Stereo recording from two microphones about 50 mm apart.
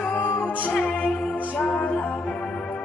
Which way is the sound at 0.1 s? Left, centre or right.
Left.